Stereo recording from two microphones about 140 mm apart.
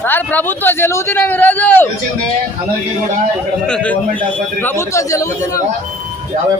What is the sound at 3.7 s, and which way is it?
Speech, 5° left (ahead or behind).